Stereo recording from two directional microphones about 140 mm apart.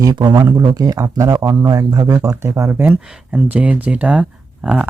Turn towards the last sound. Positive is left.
turn(degrees=-10)  # may be behind; listen again after turning